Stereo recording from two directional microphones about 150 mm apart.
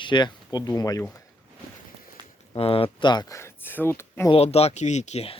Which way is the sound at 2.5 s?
40° left (ahead or behind).